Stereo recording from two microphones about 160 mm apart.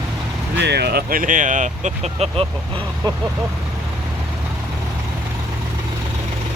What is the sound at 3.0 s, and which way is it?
Speech, 25° right (ahead or behind).